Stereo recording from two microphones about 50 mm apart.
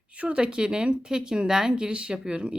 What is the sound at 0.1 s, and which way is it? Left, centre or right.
A woman's voice, right.